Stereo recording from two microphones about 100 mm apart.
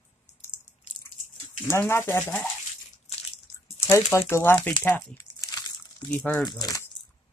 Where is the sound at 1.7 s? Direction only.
25° left (ahead or behind).